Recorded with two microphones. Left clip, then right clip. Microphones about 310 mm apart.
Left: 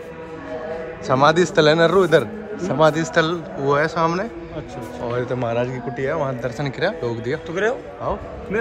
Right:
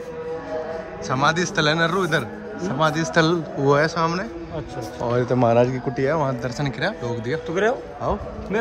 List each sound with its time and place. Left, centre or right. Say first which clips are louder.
1.0 s a man's voice: left 5 dB; centre
7.4 s a man's voice: right 1 dB; right